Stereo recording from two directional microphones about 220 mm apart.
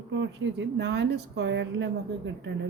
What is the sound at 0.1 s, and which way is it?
Speech, 55° right (ahead or behind).